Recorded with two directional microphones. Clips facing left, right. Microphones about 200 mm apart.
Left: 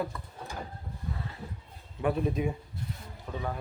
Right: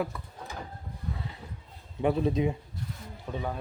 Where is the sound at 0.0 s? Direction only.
10° right (ahead or behind).